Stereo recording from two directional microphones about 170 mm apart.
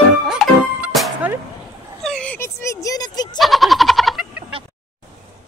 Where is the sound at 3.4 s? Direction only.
Centre (ahead or behind).